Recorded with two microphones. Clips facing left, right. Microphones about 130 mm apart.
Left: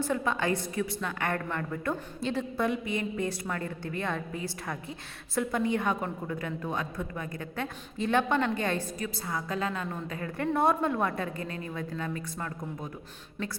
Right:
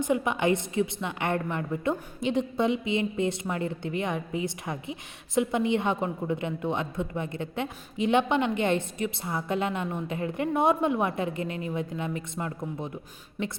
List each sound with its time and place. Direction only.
0.0 s a woman's voice: 20° right (ahead or behind)